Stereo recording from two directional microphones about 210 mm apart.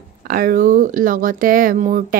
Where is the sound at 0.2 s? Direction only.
45° right (ahead or behind).